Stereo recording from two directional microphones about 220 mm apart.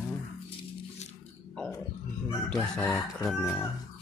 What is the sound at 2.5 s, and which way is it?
Speech, centre (ahead or behind).